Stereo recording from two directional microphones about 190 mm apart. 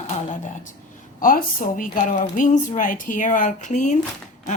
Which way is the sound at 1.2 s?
45° left (ahead or behind).